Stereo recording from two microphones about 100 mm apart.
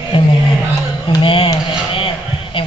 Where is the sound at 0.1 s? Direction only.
55° left (ahead or behind).